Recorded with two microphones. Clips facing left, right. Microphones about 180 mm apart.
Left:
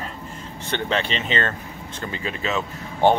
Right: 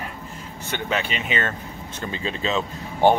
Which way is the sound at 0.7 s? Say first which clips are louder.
Left 2 dB; 10° right (ahead or behind).